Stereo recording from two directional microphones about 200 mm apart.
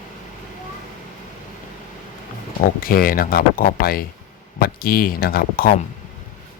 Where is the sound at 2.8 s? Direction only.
45° left (ahead or behind).